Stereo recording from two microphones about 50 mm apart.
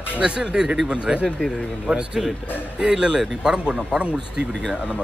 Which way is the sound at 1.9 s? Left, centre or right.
Right.